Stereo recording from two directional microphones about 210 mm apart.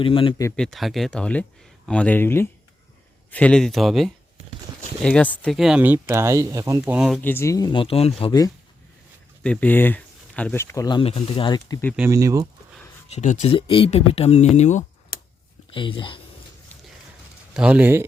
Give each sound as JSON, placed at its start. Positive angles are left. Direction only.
{"t": 0.0, "sound": "speech", "side_deg": 25}
{"t": 0.5, "sound": "speech", "side_deg": 0}
{"t": 7.2, "sound": "speech", "side_deg": 10}
{"t": 9.4, "sound": "speech", "side_deg": 5}
{"t": 11.9, "sound": "speech", "side_deg": -15}
{"t": 13.1, "sound": "speech", "side_deg": 35}
{"t": 15.7, "sound": "speech", "side_deg": 25}
{"t": 17.5, "sound": "speech", "side_deg": -5}